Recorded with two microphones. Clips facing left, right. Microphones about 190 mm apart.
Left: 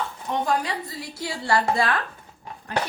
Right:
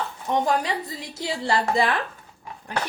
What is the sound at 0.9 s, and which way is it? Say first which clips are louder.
A woman's voice: right 2 dB; 20° right (ahead or behind).